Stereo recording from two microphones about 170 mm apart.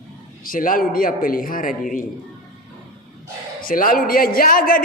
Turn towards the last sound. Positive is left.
turn(degrees=60)  # may be behind; listen again after turning